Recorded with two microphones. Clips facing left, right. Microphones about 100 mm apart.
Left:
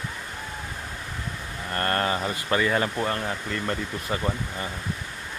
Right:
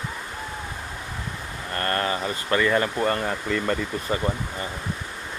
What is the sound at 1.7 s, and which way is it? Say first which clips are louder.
Speech: even; 10° left (ahead or behind).